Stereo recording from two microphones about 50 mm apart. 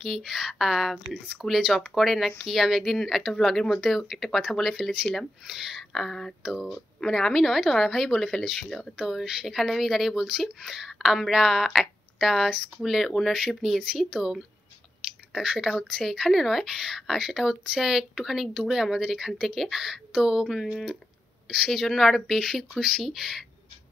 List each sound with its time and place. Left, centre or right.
0.0 s speech: centre
1.0 s speech: right
2.0 s speech: centre
6.4 s speech: centre
7.0 s speech: centre
8.9 s speech: centre
15.3 s speech: centre